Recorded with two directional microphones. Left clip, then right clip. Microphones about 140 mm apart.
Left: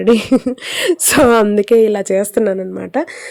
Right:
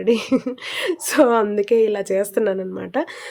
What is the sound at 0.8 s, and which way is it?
A woman's voice, 70° left (ahead or behind).